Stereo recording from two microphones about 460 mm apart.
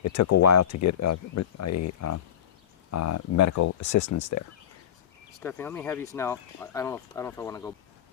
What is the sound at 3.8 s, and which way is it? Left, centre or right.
Speech, left.